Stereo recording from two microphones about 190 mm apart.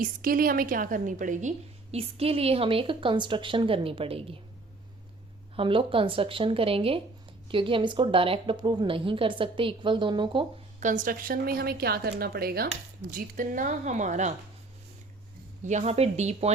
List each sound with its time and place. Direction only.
0.0 s a woman's voice: 50° right (ahead or behind); by 4.4 s 30° right (ahead or behind)
5.5 s a woman's voice: 25° right (ahead or behind)
10.8 s a woman's voice: 40° right (ahead or behind)
15.6 s a woman's voice: 35° right (ahead or behind)